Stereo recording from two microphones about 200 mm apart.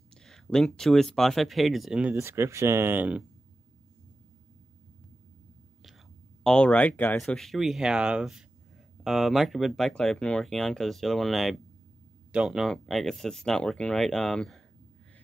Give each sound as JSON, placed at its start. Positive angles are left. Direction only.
{"t": 0.1, "sound": "speech", "side_deg": 5}
{"t": 6.4, "sound": "speech", "side_deg": 5}